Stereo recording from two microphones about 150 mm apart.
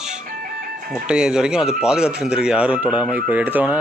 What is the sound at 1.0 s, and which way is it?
Speech, 5° right (ahead or behind).